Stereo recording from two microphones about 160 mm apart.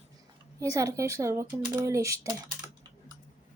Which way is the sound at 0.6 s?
20° right (ahead or behind).